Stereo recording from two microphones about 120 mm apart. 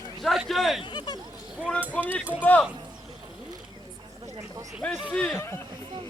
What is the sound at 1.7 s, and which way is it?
Speech, 10° left (ahead or behind).